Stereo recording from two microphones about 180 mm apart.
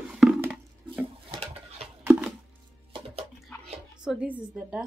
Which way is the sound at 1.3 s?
35° right (ahead or behind).